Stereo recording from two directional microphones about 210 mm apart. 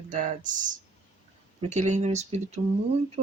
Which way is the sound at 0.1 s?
35° right (ahead or behind).